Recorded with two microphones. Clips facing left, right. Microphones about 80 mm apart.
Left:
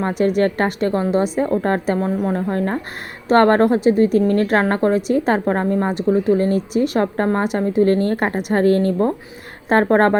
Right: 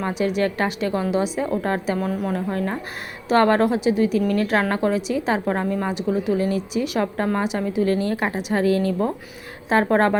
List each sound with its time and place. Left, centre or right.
0.2 s a woman's voice: left